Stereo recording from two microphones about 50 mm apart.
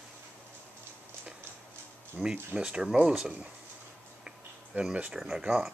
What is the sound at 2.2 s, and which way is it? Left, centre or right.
Speech, centre.